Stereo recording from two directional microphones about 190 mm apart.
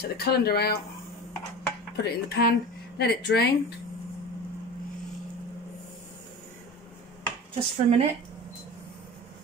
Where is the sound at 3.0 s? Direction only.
55° left (ahead or behind).